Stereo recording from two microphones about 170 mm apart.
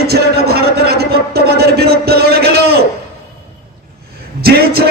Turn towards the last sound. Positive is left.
turn(degrees=-65)  # may be behind; listen again after turning